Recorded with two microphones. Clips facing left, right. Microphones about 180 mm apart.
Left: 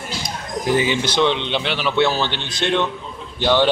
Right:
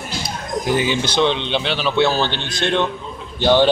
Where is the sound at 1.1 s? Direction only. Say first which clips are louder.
Right 1 dB; 20° right (ahead or behind).